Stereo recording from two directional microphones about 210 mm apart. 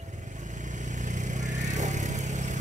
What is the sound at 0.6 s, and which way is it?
Vehicle, 35° right (ahead or behind).